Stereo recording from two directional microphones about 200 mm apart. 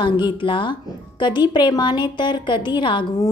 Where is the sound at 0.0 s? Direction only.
25° left (ahead or behind).